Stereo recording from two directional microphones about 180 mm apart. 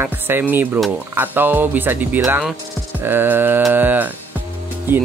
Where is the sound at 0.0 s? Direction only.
10° right (ahead or behind).